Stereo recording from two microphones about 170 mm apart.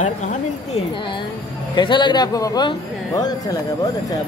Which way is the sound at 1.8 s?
25° left (ahead or behind).